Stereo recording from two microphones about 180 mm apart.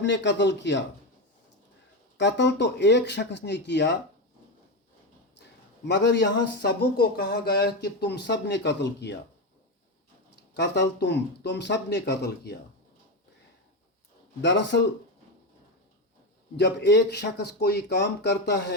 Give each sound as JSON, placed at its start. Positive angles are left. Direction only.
{"t": 0.0, "sound": "a man's voice", "side_deg": 75}
{"t": 2.1, "sound": "speech", "side_deg": 75}
{"t": 5.8, "sound": "speech", "side_deg": 75}
{"t": 10.5, "sound": "speech", "side_deg": 75}
{"t": 14.4, "sound": "a man's voice", "side_deg": 80}
{"t": 16.6, "sound": "speech", "side_deg": 75}